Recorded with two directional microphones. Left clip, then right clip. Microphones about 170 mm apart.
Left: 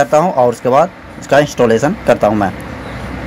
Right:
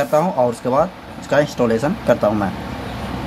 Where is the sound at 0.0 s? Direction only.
25° left (ahead or behind).